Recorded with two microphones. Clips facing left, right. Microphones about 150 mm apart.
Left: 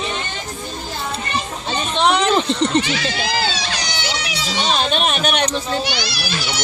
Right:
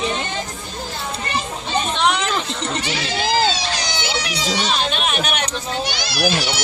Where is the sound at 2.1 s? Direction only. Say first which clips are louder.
Left 6 dB; 35° left (ahead or behind).